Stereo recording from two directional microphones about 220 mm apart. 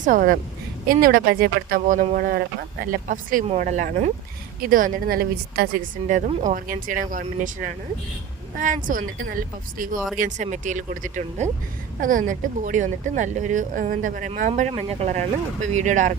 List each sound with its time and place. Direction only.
0.0 s speech: 40° right (ahead or behind)